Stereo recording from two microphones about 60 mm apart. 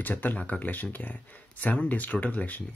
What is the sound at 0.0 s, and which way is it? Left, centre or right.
Speech, left.